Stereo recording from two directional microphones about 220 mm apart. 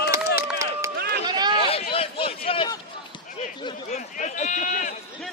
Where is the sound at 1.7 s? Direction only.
25° left (ahead or behind).